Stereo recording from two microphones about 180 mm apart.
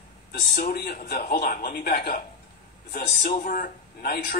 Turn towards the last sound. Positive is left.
turn(degrees=55)  # may be behind; listen again after turning